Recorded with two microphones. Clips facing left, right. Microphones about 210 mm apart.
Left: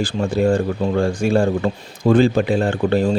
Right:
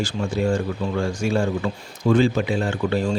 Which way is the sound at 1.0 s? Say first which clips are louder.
Left 4 dB; 55° left (ahead or behind).